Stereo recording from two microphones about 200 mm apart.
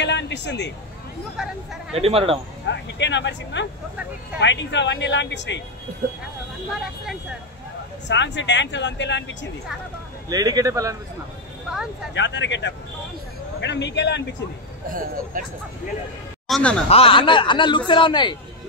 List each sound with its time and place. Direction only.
0.0 s speech: 60° left (ahead or behind)
1.3 s speech: 5° right (ahead or behind)
2.0 s speech: 30° right (ahead or behind)
2.7 s speech: 60° left (ahead or behind)
8.1 s speech: 60° left (ahead or behind)
10.3 s a man's voice: 20° right (ahead or behind)
12.1 s speech: 60° left (ahead or behind)
14.9 s speech: 45° right (ahead or behind)
16.4 s speech: centre (ahead or behind)
16.9 s a man's voice: 25° left (ahead or behind)